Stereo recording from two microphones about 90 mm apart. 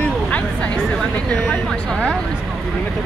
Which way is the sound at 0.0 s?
15° left (ahead or behind).